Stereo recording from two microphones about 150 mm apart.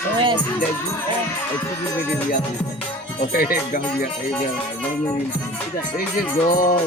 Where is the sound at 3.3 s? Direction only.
75° left (ahead or behind).